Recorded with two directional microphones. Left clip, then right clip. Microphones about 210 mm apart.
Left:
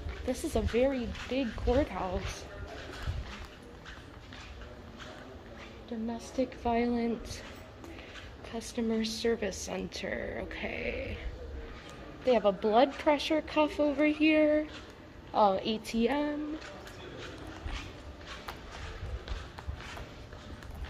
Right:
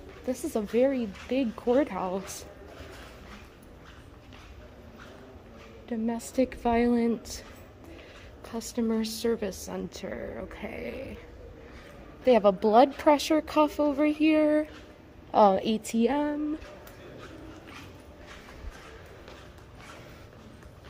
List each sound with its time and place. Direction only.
0.3 s a woman's voice: 25° right (ahead or behind)
5.9 s a woman's voice: 45° right (ahead or behind)
8.5 s a woman's voice: 35° right (ahead or behind)
10.0 s speech: 15° right (ahead or behind)
12.3 s a woman's voice: 40° right (ahead or behind)
15.3 s a woman's voice: 35° right (ahead or behind)